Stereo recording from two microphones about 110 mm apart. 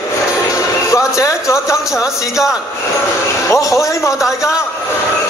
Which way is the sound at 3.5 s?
30° left (ahead or behind).